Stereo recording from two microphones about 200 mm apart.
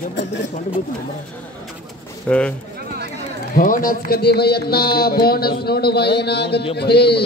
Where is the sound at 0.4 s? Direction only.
40° left (ahead or behind).